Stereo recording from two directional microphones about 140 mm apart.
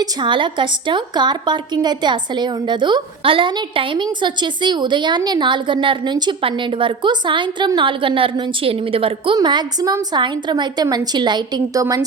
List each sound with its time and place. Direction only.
0.0 s a woman's voice: 35° right (ahead or behind)